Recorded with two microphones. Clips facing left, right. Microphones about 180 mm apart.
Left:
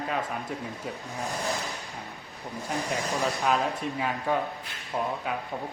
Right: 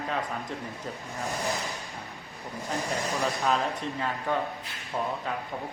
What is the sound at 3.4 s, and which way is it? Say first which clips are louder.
Speech: left 1 dB; 10° left (ahead or behind).